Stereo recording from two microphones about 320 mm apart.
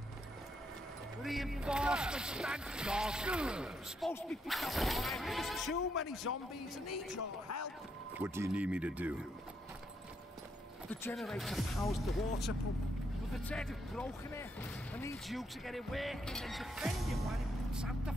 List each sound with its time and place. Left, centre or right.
1.2 s speech: centre
6.3 s speech: left
6.9 s speech: left
8.2 s speech: centre
10.9 s speech: centre